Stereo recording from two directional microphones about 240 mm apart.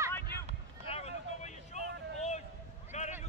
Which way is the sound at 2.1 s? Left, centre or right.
Left.